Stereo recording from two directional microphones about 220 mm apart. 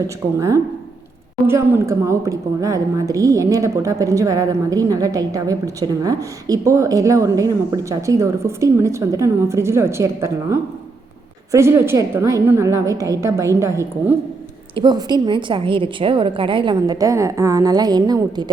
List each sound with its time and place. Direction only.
0.3 s a woman's voice: 15° right (ahead or behind)